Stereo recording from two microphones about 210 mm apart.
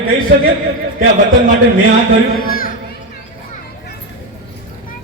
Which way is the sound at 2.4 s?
45° left (ahead or behind).